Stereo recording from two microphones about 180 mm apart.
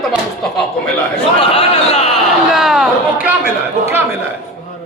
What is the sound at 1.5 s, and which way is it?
Speech, 35° left (ahead or behind).